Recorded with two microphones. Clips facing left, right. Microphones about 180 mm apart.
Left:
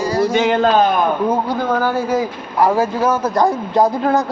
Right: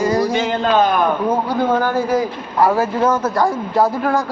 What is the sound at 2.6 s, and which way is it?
Speech, 15° left (ahead or behind).